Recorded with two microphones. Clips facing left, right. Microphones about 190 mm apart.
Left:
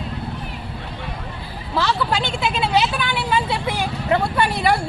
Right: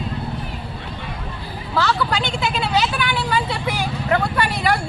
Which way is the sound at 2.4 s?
25° left (ahead or behind).